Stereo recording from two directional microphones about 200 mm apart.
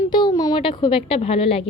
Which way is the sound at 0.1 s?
20° left (ahead or behind).